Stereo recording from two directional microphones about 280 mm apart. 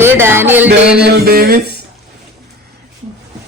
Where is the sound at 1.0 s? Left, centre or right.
Right.